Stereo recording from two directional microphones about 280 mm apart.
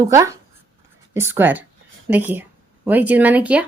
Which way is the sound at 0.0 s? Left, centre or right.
Centre.